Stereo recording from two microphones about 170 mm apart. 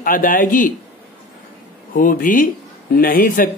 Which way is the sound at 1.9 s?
55° left (ahead or behind).